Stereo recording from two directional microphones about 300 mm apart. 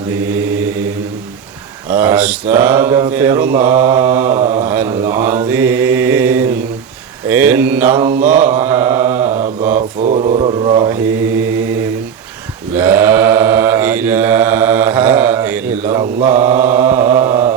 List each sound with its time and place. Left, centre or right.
0.3 s mantra: centre
1.9 s mantra: centre
10.0 s mantra: right
12.7 s mantra: centre